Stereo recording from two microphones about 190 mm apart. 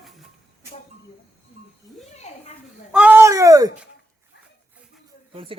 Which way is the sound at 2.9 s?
10° right (ahead or behind).